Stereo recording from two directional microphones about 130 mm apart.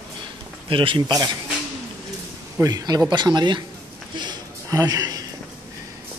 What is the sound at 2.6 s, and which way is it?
Speech, 30° right (ahead or behind).